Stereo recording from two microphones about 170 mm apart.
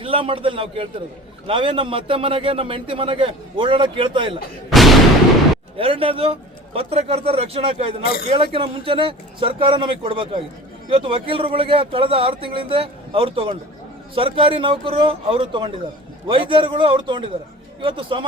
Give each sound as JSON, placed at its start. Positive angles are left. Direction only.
{"t": 0.0, "sound": "a man's voice", "side_deg": -30}
{"t": 4.7, "sound": "artillery fire", "side_deg": 0}
{"t": 5.7, "sound": "a man's voice", "side_deg": -35}